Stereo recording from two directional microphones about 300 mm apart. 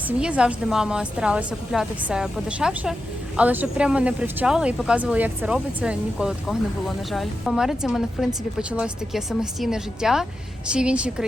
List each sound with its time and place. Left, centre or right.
0.2 s speech: centre